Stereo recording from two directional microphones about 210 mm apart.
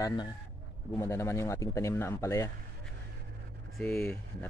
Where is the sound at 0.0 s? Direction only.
20° left (ahead or behind).